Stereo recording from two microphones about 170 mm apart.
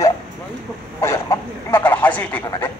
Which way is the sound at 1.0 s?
15° left (ahead or behind).